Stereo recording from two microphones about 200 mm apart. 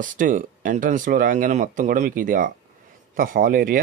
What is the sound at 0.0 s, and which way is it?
Speech, 40° right (ahead or behind).